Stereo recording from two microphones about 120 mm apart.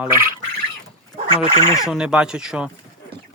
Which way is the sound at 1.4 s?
50° right (ahead or behind).